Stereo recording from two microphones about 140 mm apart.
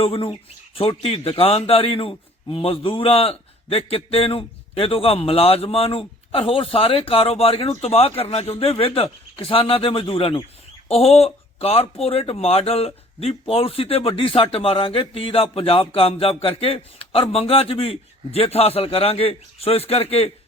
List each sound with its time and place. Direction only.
0.0 s a man's voice: 40° left (ahead or behind)